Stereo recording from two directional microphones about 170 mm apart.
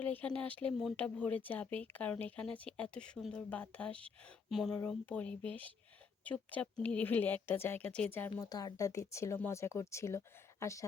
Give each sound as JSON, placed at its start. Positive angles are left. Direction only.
{"t": 0.0, "sound": "speech", "side_deg": 10}
{"t": 8.4, "sound": "speech", "side_deg": 20}